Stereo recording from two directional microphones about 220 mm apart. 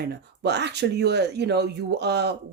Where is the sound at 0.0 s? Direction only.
50° right (ahead or behind).